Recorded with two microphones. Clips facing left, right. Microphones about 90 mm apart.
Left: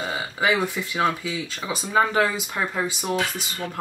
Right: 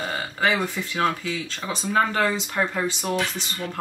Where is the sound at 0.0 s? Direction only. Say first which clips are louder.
Even; 5° left (ahead or behind).